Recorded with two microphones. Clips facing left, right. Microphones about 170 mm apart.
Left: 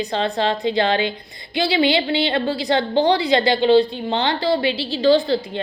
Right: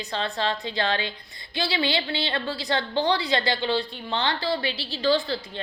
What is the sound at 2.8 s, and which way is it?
Speech, 35° left (ahead or behind).